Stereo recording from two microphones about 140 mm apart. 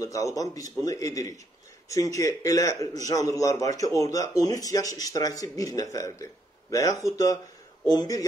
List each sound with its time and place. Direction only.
0.0 s a man's voice: 25° left (ahead or behind)